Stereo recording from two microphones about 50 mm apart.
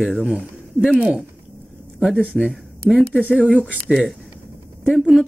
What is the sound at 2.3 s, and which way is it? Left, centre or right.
Speech, centre.